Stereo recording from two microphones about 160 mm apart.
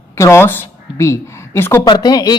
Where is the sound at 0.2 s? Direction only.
15° left (ahead or behind).